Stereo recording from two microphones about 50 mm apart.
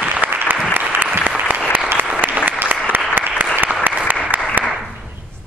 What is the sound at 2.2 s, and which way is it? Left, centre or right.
Applause, right.